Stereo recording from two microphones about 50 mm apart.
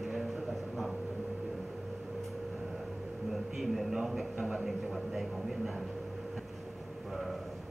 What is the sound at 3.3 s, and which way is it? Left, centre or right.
Speech, centre.